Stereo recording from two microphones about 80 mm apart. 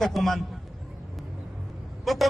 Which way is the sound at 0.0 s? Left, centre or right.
Centre.